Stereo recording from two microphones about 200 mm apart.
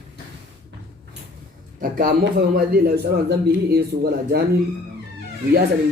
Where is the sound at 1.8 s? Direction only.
45° right (ahead or behind).